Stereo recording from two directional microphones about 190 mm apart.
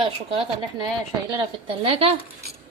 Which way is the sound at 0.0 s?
30° right (ahead or behind).